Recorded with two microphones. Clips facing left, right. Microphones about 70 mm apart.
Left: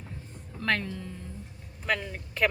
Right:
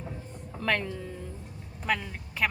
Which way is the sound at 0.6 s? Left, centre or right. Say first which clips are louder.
Even; centre.